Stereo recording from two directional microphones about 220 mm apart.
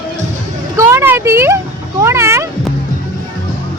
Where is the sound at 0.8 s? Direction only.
10° right (ahead or behind).